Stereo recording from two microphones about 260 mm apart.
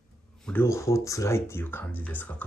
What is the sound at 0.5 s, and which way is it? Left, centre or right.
Speech, centre.